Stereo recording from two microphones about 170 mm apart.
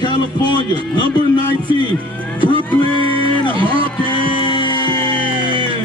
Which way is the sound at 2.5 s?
30° right (ahead or behind).